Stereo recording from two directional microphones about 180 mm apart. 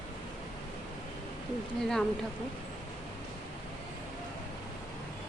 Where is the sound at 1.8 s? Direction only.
5° left (ahead or behind).